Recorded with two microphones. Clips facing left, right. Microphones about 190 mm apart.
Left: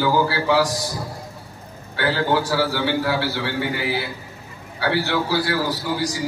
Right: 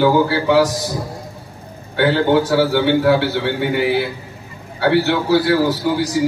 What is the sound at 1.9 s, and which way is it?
A man's voice, 65° right (ahead or behind).